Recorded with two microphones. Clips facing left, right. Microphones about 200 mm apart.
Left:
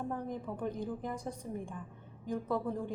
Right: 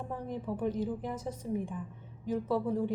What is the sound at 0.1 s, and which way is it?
A woman's voice, 5° right (ahead or behind).